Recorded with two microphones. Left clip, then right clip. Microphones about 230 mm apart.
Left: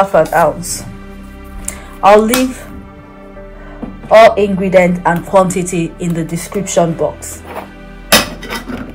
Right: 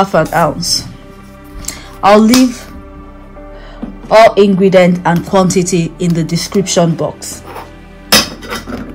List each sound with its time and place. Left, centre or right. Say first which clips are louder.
0.0 s speech: left 1 dB; right
1.7 s music: left 1 dB; right
4.1 s speech: even; right